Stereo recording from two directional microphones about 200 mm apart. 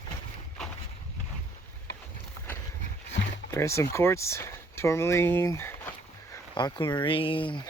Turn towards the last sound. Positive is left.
turn(degrees=25)  # may be behind; listen again after turning